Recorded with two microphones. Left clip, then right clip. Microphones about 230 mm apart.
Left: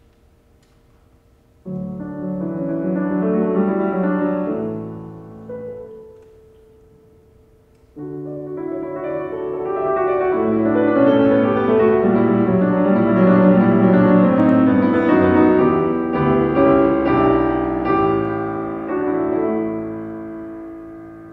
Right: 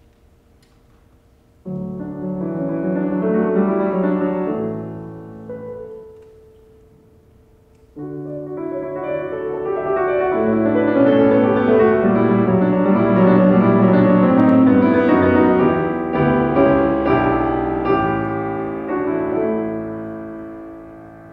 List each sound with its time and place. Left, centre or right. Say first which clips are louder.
2.1 s music: even; right
8.0 s music: even; right